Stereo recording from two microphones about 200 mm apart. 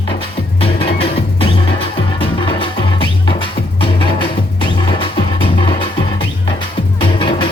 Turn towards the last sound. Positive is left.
turn(degrees=25)  # may be behind; listen again after turning